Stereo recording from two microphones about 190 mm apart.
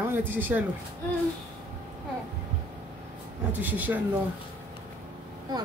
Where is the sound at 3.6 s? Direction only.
10° right (ahead or behind).